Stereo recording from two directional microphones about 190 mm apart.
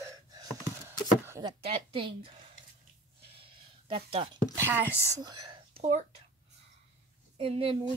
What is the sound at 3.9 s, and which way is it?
Speech, 30° right (ahead or behind).